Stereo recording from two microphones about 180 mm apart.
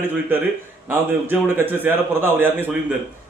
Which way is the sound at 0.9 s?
10° right (ahead or behind).